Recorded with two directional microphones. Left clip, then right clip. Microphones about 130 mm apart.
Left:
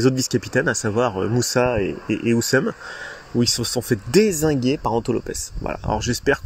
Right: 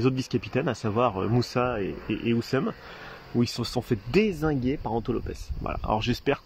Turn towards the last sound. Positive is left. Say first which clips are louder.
# left 5 dB
turn(degrees=0)  # may be behind; listen again after turning